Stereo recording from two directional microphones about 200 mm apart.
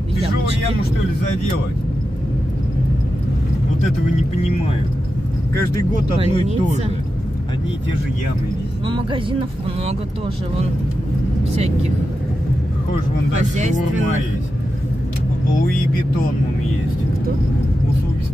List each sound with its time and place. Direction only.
6.1 s speech: 35° right (ahead or behind)
11.5 s speech: 30° right (ahead or behind)
13.3 s speech: 35° right (ahead or behind)